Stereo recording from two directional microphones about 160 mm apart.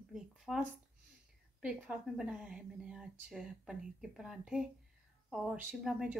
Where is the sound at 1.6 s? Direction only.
5° right (ahead or behind).